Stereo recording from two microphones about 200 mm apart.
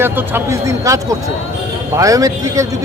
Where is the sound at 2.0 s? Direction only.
15° right (ahead or behind).